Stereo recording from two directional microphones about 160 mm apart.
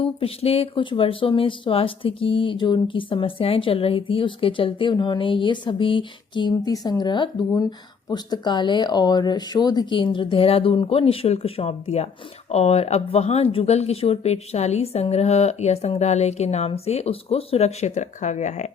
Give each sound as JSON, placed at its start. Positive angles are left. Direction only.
{"t": 0.0, "sound": "speech", "side_deg": 35}